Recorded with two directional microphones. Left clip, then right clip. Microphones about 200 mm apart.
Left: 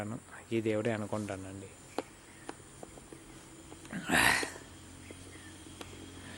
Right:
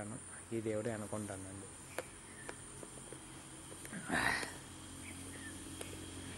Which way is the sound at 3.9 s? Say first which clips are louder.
Left 8 dB; 35° left (ahead or behind).